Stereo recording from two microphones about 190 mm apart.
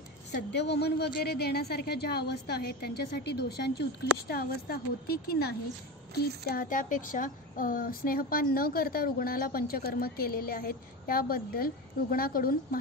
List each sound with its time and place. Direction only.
0.3 s a woman's voice: 60° left (ahead or behind)